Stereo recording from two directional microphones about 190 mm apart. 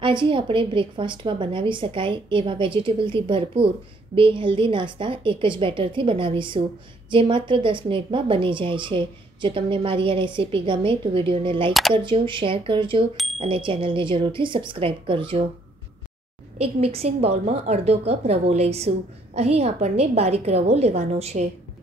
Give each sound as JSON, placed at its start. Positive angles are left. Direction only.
{"t": 0.0, "sound": "a woman's voice", "side_deg": -25}
{"t": 13.1, "sound": "bicycle bell", "side_deg": 0}
{"t": 13.4, "sound": "a woman's voice", "side_deg": -25}
{"t": 16.5, "sound": "a woman's voice", "side_deg": -30}